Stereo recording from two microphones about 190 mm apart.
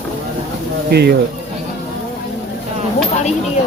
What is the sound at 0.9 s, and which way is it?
Speech, 55° right (ahead or behind).